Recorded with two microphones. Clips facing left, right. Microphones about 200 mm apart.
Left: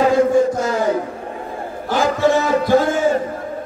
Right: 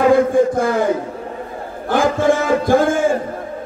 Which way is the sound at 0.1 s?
55° right (ahead or behind).